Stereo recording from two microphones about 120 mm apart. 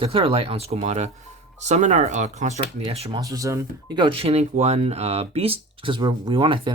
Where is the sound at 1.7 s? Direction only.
85° right.